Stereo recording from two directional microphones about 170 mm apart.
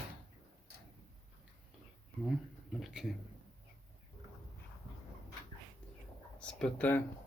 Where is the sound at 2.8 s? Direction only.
Centre (ahead or behind).